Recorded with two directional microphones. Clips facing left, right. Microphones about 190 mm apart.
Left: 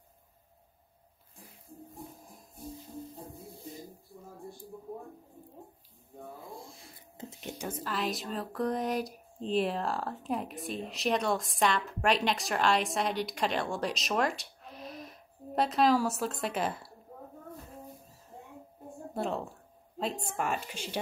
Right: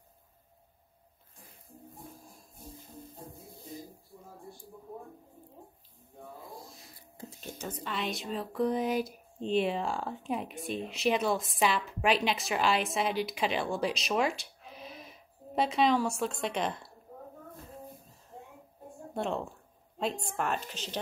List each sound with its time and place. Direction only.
7.2 s a sound: 20° left (ahead or behind)
7.8 s speech: centre (ahead or behind)
19.1 s a woman's voice: centre (ahead or behind)